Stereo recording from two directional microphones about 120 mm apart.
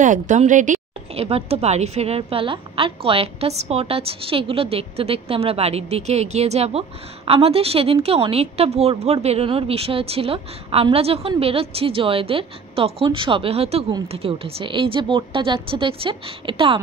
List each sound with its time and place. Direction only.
0.0 s a woman's voice: 90° right; by 16.8 s 45° right (ahead or behind)